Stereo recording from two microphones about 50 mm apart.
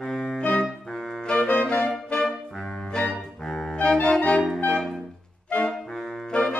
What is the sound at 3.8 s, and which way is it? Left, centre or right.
Organ, centre.